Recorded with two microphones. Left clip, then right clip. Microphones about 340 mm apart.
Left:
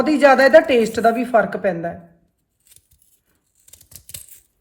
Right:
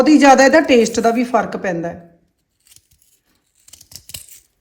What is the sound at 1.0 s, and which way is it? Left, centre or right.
Speech, right.